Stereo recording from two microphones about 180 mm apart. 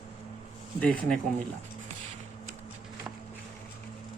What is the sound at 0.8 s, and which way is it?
Speech, 5° left (ahead or behind).